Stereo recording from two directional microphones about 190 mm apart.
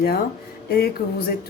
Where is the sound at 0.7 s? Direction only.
50° left (ahead or behind).